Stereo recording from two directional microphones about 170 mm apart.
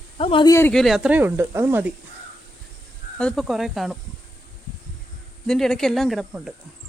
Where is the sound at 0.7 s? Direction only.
Centre (ahead or behind).